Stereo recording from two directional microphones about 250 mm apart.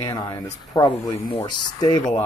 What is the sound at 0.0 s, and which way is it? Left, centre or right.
Speech, centre.